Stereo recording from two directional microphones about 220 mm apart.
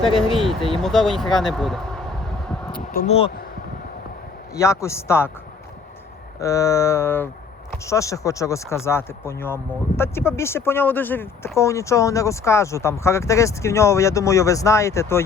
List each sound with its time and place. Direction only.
0.0 s speech: 25° left (ahead or behind)
0.8 s speech: centre (ahead or behind)
2.7 s speech: 40° left (ahead or behind)
3.1 s speech: 25° left (ahead or behind)
4.5 s speech: 15° left (ahead or behind)
6.4 s speech: 15° left (ahead or behind)